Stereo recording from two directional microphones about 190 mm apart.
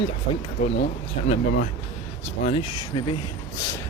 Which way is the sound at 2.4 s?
30° left (ahead or behind).